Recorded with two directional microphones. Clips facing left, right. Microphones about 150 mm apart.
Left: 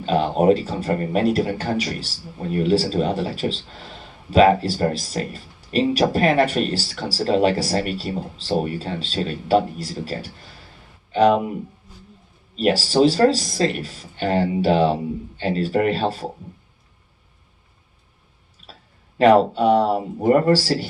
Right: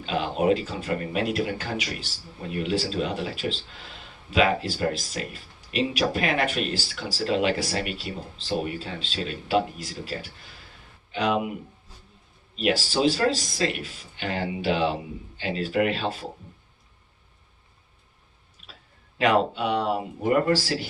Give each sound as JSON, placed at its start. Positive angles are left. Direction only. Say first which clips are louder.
{"t": 0.0, "sound": "speech", "louder": "left 7 dB", "side_deg": 40}
{"t": 12.5, "sound": "speech", "louder": "left 7 dB", "side_deg": 40}
{"t": 19.2, "sound": "speech", "louder": "left 8 dB", "side_deg": 40}